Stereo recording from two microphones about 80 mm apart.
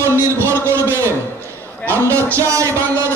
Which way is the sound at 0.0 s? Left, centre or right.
Right.